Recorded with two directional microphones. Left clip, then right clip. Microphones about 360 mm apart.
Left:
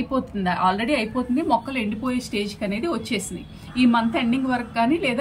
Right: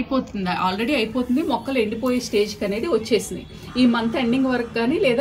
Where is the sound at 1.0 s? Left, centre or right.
Right.